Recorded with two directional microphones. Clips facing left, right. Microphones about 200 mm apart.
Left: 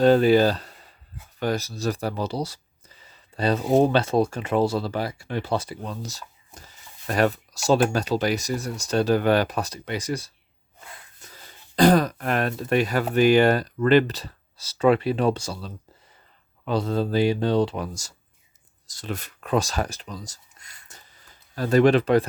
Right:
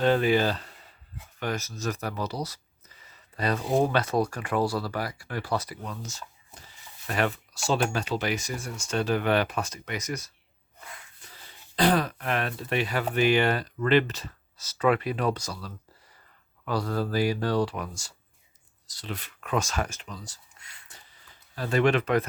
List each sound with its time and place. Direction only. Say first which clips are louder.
0.0 s speech: left 6 dB; 35° left (ahead or behind)
11.2 s speech: left 3 dB; 45° left (ahead or behind)
18.9 s speech: left 5 dB; 45° left (ahead or behind)